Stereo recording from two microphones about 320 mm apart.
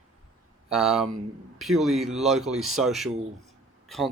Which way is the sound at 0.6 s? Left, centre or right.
Centre.